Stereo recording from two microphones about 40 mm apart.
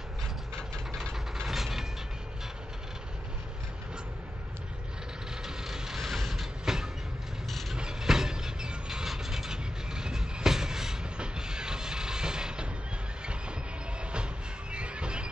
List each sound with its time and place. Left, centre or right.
1.1 s vehicle: centre
5.4 s vehicle: centre
13.2 s train: right
14.7 s a sound: right